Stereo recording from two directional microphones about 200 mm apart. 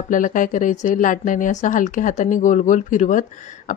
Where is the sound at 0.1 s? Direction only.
40° left (ahead or behind).